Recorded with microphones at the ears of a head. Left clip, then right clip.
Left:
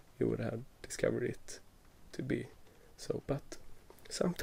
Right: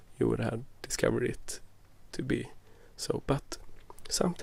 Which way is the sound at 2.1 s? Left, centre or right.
Right.